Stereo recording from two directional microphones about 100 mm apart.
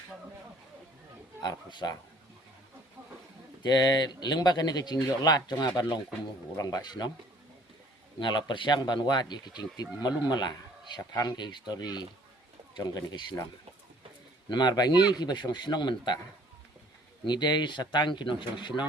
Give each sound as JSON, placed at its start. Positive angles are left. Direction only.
{"t": 1.4, "sound": "speech", "side_deg": 45}
{"t": 3.6, "sound": "speech", "side_deg": 45}
{"t": 8.2, "sound": "speech", "side_deg": 50}
{"t": 11.1, "sound": "speech", "side_deg": 35}
{"t": 11.3, "sound": "speech", "side_deg": 45}
{"t": 14.5, "sound": "speech", "side_deg": 45}
{"t": 17.2, "sound": "speech", "side_deg": 45}